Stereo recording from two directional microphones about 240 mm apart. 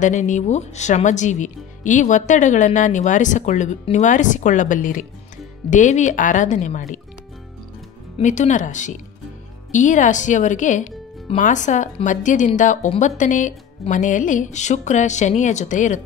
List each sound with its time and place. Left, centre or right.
0.0 s speech: left
8.2 s speech: left